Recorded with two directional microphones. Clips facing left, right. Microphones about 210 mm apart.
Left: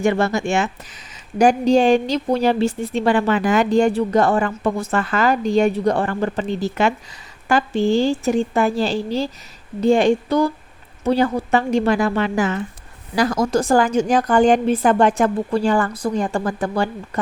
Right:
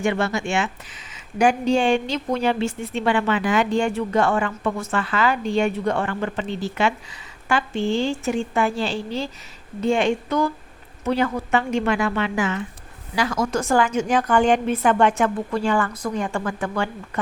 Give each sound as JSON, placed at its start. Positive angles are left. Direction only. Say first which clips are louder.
{"t": 0.0, "sound": "a woman's voice", "louder": "left 4 dB", "side_deg": 40}